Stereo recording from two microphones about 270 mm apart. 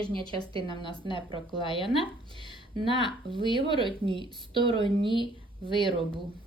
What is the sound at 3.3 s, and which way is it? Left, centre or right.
A woman's voice, centre.